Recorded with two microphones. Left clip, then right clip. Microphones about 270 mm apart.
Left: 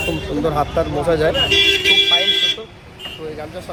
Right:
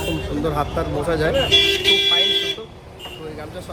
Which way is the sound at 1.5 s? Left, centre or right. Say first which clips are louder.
Left 1 dB; right.